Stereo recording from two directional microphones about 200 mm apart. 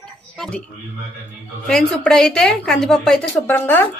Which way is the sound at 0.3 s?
Centre (ahead or behind).